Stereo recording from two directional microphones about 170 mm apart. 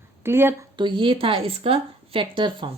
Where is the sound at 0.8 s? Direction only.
30° right (ahead or behind).